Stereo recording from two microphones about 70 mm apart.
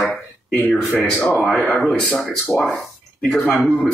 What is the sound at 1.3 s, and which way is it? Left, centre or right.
A man's voice, centre.